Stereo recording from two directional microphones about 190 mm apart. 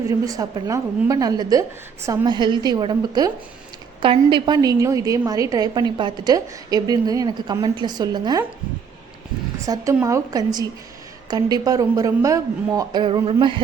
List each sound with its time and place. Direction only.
0.1 s a woman's voice: 20° right (ahead or behind)
9.6 s a woman's voice: 15° right (ahead or behind)